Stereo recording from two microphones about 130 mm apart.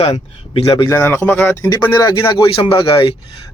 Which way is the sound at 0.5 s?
40° left (ahead or behind).